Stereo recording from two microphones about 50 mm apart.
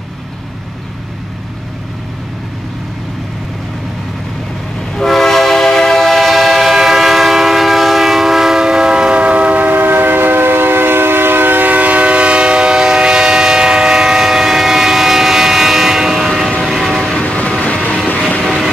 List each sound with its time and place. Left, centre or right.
4.9 s train: centre
17.1 s train: left
18.4 s vehicle: centre